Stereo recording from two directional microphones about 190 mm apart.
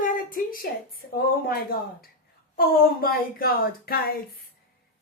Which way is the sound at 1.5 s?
50° left (ahead or behind).